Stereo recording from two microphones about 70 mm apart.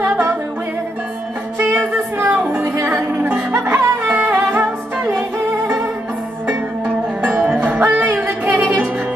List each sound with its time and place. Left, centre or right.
0.1 s music: right
1.6 s music: right
7.5 s music: right